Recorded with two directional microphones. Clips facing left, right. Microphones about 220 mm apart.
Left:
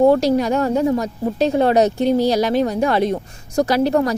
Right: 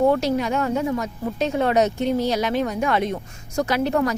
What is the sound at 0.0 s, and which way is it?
A woman's voice, 35° left (ahead or behind).